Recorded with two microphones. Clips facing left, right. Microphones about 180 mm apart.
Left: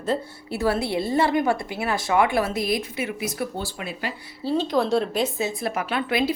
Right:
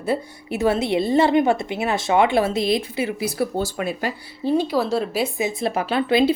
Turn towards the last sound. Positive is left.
turn(degrees=-30)  # may be behind; listen again after turning